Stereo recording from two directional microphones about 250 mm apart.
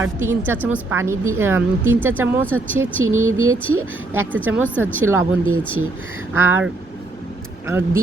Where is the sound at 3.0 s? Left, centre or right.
Right.